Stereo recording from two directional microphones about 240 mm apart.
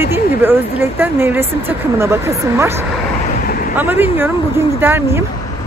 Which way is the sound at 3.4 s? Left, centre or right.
Left.